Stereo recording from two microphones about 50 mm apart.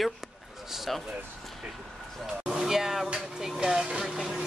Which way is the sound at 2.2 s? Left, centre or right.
Centre.